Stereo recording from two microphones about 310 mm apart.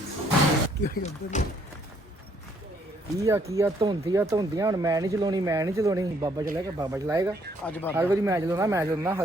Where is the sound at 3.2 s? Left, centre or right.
Centre.